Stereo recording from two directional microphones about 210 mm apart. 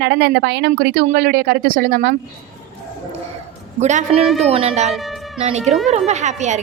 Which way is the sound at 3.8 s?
35° right (ahead or behind).